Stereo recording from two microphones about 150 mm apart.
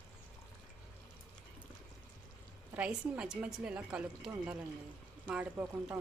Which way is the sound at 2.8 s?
5° right (ahead or behind).